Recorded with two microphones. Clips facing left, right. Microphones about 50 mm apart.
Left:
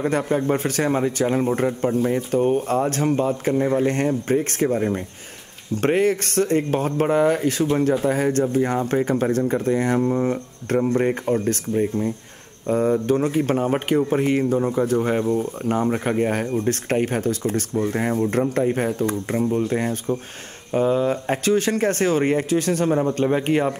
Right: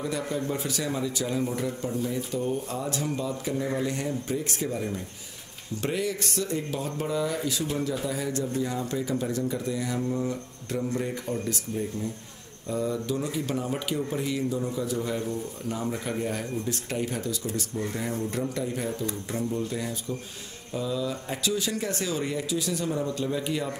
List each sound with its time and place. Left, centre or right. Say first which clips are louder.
0.0 s speech: left 9 dB; left